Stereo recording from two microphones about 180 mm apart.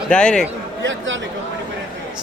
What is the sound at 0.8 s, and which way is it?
Speech, 90° right.